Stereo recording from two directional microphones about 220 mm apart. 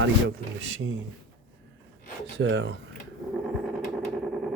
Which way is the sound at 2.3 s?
55° right (ahead or behind).